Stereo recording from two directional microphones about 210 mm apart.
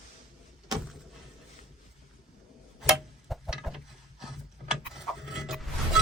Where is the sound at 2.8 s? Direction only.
Centre (ahead or behind).